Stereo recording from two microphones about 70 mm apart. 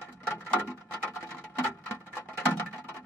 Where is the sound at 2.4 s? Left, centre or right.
Left.